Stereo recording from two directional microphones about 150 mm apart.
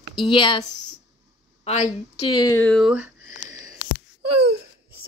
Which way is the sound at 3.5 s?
20° right (ahead or behind).